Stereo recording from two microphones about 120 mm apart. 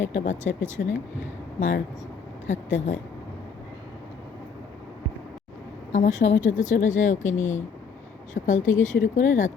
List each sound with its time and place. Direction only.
0.1 s speech: 90° left
2.5 s speech: 90° left
5.9 s speech: 90° left